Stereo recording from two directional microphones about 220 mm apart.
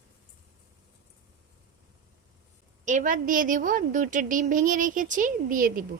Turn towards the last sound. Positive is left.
turn(degrees=-40)  # may be behind; listen again after turning